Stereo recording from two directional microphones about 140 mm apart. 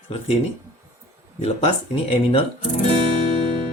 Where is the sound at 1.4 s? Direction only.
45° left (ahead or behind).